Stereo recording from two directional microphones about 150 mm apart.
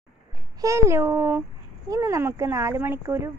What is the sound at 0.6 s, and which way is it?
Speech, 20° right (ahead or behind).